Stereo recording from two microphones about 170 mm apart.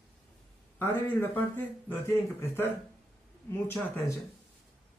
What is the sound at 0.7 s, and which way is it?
A man's voice, 10° left (ahead or behind).